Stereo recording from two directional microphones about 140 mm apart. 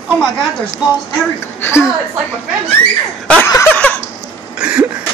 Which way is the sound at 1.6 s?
20° left (ahead or behind).